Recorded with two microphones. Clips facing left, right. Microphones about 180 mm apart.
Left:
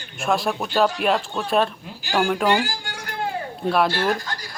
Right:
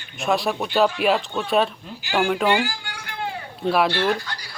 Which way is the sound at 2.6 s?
45° left (ahead or behind).